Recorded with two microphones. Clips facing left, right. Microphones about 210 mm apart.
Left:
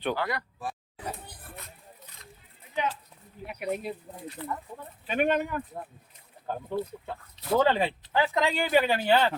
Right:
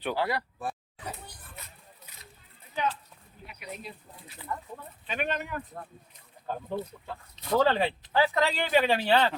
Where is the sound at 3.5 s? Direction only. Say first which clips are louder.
Left 10 dB; 55° left (ahead or behind).